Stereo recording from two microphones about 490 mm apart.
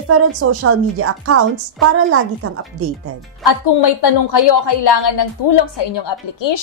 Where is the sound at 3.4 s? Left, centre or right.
Left.